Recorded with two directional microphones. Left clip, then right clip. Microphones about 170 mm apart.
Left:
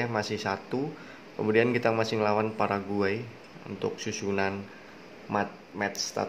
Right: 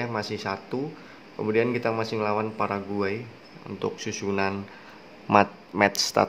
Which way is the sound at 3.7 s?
10° right (ahead or behind).